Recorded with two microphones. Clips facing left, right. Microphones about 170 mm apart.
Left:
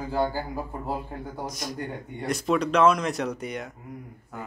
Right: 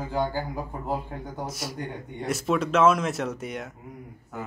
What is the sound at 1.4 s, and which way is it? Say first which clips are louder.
Speech: even; 5° right (ahead or behind).